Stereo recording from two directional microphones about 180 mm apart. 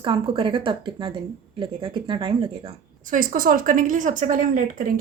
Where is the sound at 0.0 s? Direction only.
30° right (ahead or behind).